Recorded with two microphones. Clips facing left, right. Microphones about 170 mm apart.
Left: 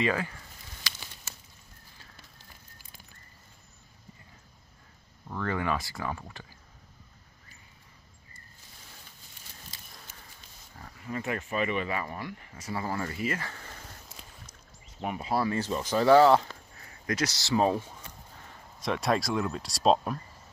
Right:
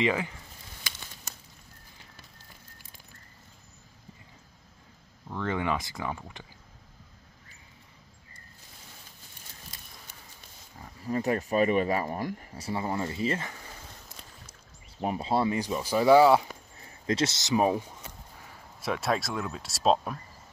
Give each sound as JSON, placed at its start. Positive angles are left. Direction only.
{"t": 0.0, "sound": "speech", "side_deg": -20}
{"t": 5.4, "sound": "speech", "side_deg": -20}
{"t": 11.0, "sound": "speech", "side_deg": -35}
{"t": 13.5, "sound": "a sound", "side_deg": -10}
{"t": 15.0, "sound": "speech", "side_deg": -30}
{"t": 16.7, "sound": "speech", "side_deg": -25}
{"t": 18.8, "sound": "speech", "side_deg": -5}